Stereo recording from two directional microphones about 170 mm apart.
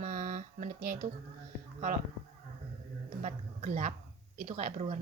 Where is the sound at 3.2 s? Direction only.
45° right (ahead or behind).